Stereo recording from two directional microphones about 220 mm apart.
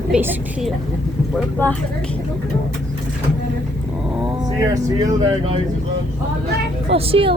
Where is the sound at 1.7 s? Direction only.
5° left (ahead or behind).